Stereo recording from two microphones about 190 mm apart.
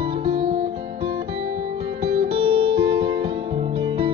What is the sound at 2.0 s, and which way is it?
Music, 35° right (ahead or behind).